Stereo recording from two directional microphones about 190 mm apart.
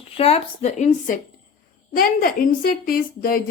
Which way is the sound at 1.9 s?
50° left (ahead or behind).